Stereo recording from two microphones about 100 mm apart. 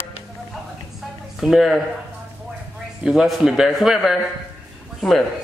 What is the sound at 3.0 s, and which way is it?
A man's voice, 5° right (ahead or behind).